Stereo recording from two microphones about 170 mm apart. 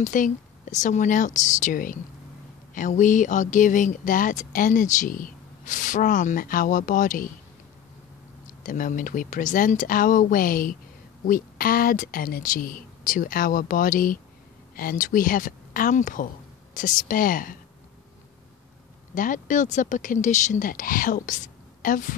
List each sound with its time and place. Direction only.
0.0 s speech: 50° left (ahead or behind)
8.5 s speech: 50° left (ahead or behind)
19.1 s speech: 50° left (ahead or behind)